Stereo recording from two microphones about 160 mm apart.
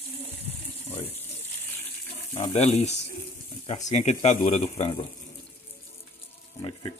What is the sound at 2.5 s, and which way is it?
Speech, 45° left (ahead or behind).